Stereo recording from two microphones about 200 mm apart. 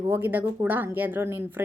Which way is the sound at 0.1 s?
10° right (ahead or behind).